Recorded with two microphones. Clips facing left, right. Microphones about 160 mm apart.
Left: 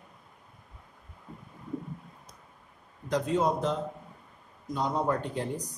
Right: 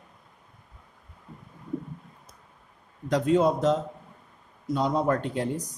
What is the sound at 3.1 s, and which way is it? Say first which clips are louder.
Speech: right 5 dB; 90° right.